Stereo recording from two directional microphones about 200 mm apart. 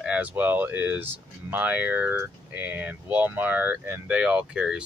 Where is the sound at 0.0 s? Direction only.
5° right (ahead or behind).